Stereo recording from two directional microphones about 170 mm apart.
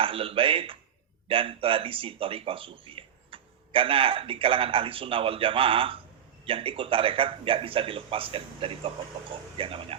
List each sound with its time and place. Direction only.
0.0 s a man's voice: 30° right (ahead or behind)